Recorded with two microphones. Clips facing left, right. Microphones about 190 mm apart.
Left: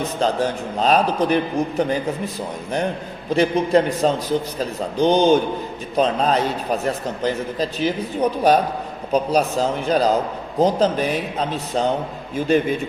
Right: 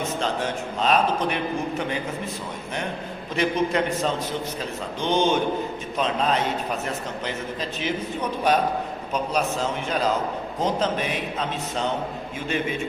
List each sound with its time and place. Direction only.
0.0 s a man's voice: 35° left (ahead or behind)
3.3 s a man's voice: 35° left (ahead or behind)